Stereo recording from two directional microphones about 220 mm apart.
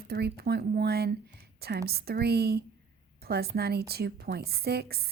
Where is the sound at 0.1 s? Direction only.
45° right (ahead or behind).